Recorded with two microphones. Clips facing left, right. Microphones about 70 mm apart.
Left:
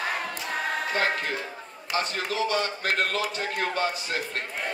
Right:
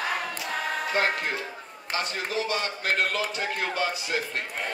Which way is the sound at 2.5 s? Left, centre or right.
Left.